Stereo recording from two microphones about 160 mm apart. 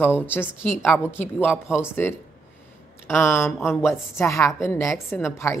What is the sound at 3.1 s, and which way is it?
A woman's voice, 15° left (ahead or behind).